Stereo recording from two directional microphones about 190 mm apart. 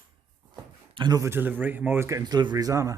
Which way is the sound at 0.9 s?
20° right (ahead or behind).